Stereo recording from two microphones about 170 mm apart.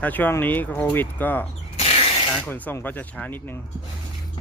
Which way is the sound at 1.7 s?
35° left (ahead or behind).